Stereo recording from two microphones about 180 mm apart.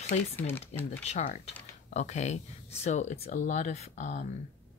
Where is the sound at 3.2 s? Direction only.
50° left (ahead or behind).